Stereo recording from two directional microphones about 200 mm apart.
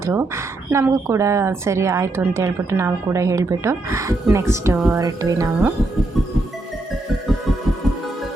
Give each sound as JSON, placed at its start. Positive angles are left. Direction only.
{"t": 0.0, "sound": "speech", "side_deg": -15}